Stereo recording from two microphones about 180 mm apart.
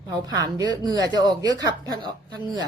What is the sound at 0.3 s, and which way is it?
Speech, 20° right (ahead or behind).